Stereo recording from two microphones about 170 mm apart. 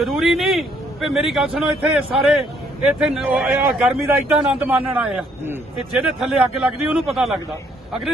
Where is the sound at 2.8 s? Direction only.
5° right (ahead or behind).